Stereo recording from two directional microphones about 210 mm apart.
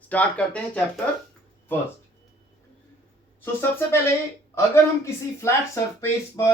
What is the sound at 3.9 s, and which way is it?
Speech, 10° left (ahead or behind).